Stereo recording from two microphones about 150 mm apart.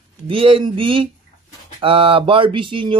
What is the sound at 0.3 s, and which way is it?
Speech, 35° right (ahead or behind).